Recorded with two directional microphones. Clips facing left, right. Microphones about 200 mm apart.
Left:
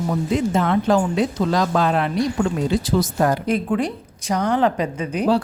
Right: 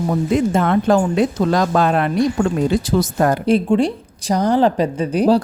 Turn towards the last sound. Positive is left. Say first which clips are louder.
# right 5 dB
turn(degrees=-35)  # may be behind; listen again after turning